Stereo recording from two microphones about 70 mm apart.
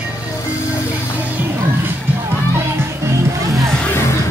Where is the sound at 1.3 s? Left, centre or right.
Right.